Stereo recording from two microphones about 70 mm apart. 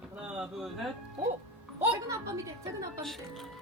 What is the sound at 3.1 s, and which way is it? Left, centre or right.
Speech, centre.